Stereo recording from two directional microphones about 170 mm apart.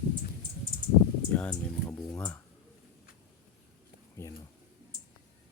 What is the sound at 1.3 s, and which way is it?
Speech, 10° left (ahead or behind).